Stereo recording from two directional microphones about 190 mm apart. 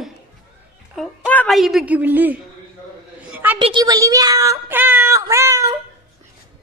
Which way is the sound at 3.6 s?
25° right (ahead or behind).